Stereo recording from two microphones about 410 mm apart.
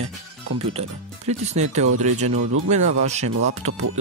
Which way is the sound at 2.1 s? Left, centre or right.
Right.